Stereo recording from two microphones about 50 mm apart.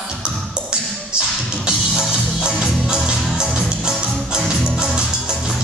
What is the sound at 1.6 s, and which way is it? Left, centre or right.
Music, centre.